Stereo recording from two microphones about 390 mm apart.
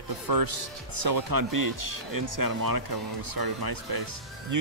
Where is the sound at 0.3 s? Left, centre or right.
Right.